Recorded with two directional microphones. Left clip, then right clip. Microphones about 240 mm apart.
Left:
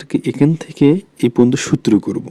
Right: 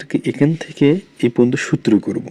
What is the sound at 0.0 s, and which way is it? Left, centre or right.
Speech, left.